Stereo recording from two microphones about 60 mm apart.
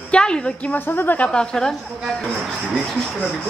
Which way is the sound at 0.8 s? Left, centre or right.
Left.